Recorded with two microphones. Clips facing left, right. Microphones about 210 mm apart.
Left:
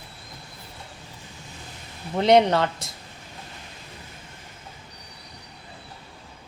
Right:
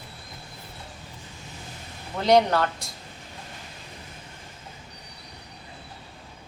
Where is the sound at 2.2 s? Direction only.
25° left (ahead or behind).